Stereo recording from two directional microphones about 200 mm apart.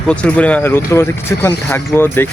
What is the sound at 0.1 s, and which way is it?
Speech, 5° left (ahead or behind).